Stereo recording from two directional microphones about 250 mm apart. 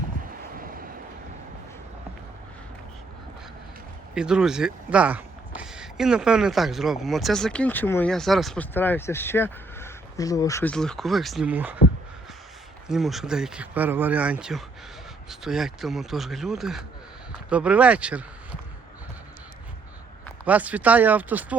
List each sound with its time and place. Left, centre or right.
0.5 s vehicle: right
4.1 s speech: centre
12.9 s speech: centre
20.4 s speech: centre